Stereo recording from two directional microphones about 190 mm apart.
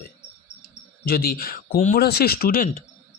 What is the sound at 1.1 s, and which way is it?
Speech, 50° left (ahead or behind).